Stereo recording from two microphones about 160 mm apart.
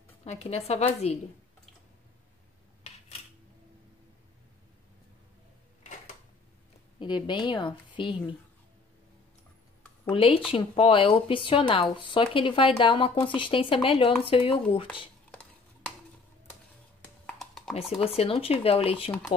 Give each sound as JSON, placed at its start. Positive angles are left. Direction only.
{"t": 0.2, "sound": "speech", "side_deg": 40}
{"t": 7.0, "sound": "speech", "side_deg": 30}
{"t": 10.0, "sound": "speech", "side_deg": 35}
{"t": 17.4, "sound": "a sound", "side_deg": 0}
{"t": 17.7, "sound": "speech", "side_deg": 40}